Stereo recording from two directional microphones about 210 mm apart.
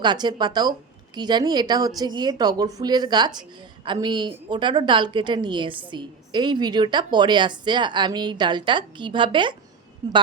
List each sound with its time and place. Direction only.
0.0 s speech: 20° right (ahead or behind)